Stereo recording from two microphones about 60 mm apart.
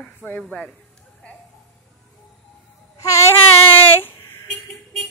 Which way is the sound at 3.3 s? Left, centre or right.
Left.